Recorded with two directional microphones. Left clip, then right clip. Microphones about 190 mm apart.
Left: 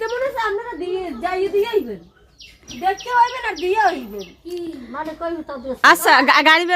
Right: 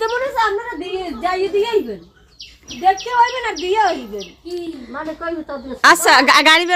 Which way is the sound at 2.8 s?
25° left (ahead or behind).